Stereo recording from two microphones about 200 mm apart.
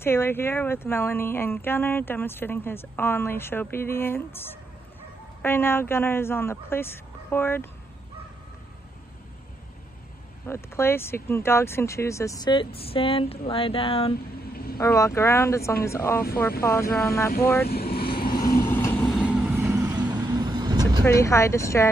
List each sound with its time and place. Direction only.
0.0 s speech: 10° left (ahead or behind)
10.4 s speech: 10° left (ahead or behind); by 14.1 s 30° left (ahead or behind)
14.8 s speech: 15° left (ahead or behind)
17.6 s speech: 50° left (ahead or behind)
18.1 s vehicle: 50° left (ahead or behind)
18.6 s vehicle: 10° left (ahead or behind)
19.0 s vehicle: centre (ahead or behind)
20.1 s vehicle: 20° right (ahead or behind)
21.0 s speech: 15° left (ahead or behind)